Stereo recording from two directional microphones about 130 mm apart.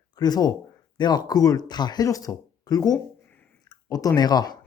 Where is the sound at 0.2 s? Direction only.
30° left (ahead or behind).